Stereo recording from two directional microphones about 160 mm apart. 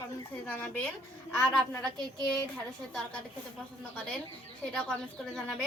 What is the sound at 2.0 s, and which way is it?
Speech, 25° right (ahead or behind).